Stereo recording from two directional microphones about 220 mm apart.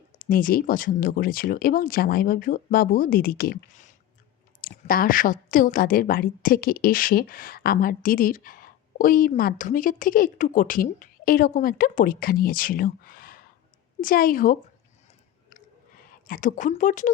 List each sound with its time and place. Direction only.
0.2 s a woman's voice: 40° left (ahead or behind)
16.2 s a woman's voice: 40° left (ahead or behind)